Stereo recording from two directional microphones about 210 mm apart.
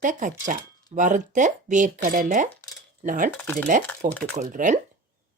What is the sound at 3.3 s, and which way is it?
Speech, 5° left (ahead or behind).